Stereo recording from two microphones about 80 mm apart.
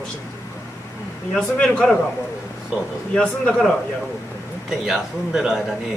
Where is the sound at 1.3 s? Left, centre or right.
Centre.